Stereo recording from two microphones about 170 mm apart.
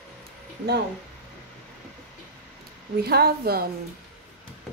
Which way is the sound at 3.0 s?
65° right (ahead or behind).